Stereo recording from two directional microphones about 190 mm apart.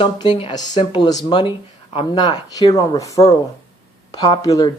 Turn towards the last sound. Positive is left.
turn(degrees=20)  # may be behind; listen again after turning